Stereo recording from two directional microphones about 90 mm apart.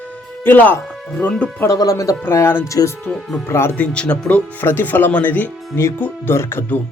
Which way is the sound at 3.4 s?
30° left (ahead or behind).